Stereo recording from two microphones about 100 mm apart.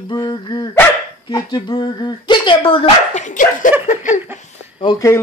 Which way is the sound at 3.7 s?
20° right (ahead or behind).